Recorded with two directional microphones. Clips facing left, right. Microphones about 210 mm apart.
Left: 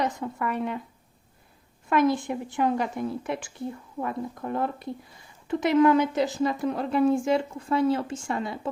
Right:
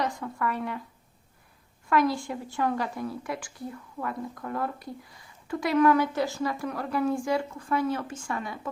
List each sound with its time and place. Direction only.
0.0 s a woman's voice: 20° left (ahead or behind)
1.9 s a woman's voice: 20° left (ahead or behind)